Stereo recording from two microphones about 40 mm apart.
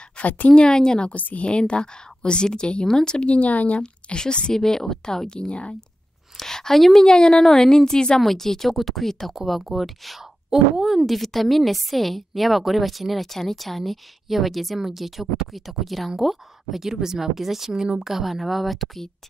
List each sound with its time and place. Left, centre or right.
0.2 s speech: left
0.5 s a woman's voice: left
1.1 s speech: left
1.4 s a woman's voice: left
3.3 s speech: left
3.8 s a woman's voice: left
4.6 s a woman's voice: centre
6.3 s a sound: centre
6.8 s a woman's voice: centre
8.2 s speech: centre